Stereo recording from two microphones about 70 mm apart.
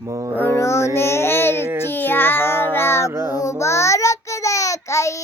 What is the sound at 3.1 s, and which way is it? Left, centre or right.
Mantra, right.